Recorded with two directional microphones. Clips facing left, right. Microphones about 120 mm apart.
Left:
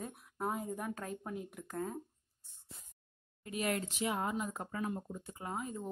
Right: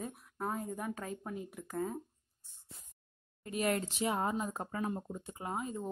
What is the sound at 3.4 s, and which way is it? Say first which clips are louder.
Speech: right 3 dB; 40° right (ahead or behind).